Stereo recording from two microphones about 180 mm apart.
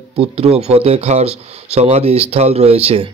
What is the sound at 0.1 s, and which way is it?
Speech, 35° right (ahead or behind).